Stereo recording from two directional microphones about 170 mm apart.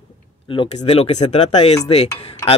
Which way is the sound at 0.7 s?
35° left (ahead or behind).